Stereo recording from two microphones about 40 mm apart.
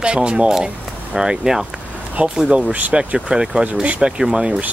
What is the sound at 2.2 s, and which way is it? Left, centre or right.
Speech, right.